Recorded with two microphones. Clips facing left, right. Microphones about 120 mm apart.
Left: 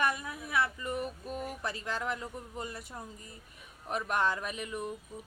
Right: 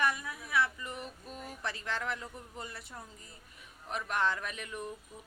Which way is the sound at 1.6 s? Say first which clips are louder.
Right 3 dB; 40° left (ahead or behind).